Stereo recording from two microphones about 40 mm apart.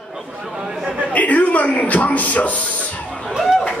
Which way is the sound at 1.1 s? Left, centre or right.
Left.